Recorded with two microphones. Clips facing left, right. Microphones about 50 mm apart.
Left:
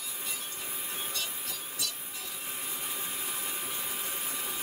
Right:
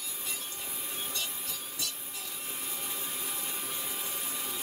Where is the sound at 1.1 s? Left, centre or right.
Centre.